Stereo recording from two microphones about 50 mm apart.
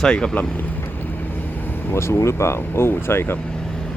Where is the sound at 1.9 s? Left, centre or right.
Left.